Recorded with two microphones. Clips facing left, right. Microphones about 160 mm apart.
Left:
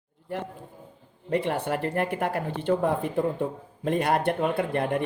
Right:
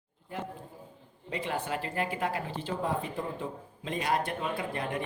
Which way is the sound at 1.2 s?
60° left (ahead or behind).